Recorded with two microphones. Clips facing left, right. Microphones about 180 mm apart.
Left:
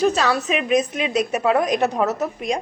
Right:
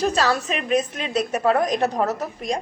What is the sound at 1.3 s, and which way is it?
Speech, 10° left (ahead or behind).